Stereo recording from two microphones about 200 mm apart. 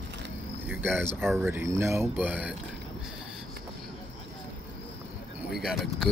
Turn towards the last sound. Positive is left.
turn(degrees=0)  # may be behind; listen again after turning